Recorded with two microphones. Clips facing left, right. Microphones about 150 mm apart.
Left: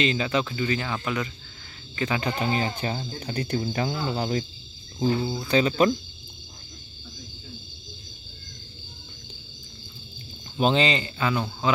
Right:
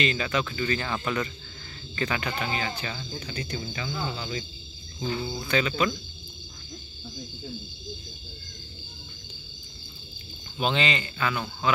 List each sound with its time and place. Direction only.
0.0 s speech: 25° left (ahead or behind)
2.4 s speech: 30° left (ahead or behind)
3.2 s speech: 60° left (ahead or behind)
3.5 s speech: 45° left (ahead or behind)
4.9 s speech: 35° left (ahead or behind)
10.6 s speech: 35° left (ahead or behind)